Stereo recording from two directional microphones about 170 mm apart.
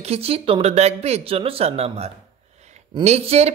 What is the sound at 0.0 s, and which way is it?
Speech, 35° right (ahead or behind).